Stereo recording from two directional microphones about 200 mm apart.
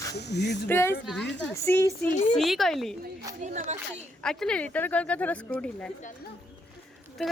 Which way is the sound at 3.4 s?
35° right (ahead or behind).